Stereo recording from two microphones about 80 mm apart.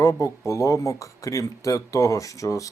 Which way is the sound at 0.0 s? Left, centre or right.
Left.